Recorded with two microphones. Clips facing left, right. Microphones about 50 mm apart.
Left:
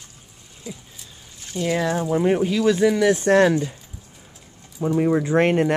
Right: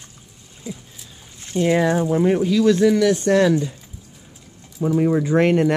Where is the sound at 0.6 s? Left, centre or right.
Centre.